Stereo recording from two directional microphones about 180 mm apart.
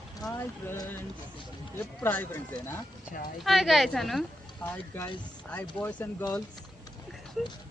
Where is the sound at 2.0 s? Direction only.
10° left (ahead or behind).